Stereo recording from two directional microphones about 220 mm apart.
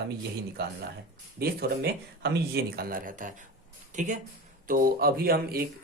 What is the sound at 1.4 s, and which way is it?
Speech, 45° right (ahead or behind).